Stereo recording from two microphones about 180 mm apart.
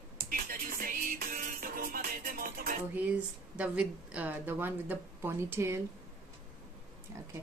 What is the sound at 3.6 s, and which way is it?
A woman's voice, 5° right (ahead or behind).